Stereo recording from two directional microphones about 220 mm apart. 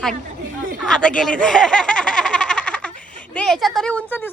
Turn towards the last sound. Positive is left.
turn(degrees=10)  # may be behind; listen again after turning